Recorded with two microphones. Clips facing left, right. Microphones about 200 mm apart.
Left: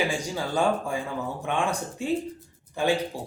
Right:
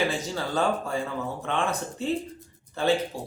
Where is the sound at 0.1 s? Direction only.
15° left (ahead or behind).